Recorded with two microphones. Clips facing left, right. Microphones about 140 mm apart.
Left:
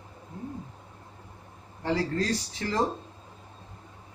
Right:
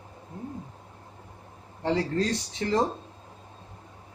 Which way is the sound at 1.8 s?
25° right (ahead or behind).